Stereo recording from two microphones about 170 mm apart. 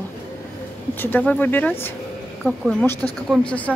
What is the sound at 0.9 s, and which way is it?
Speech, 10° left (ahead or behind).